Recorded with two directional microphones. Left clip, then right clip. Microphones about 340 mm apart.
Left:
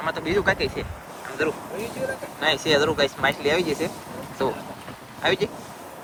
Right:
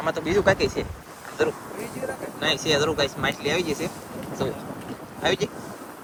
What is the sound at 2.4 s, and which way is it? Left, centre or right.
Speech, centre.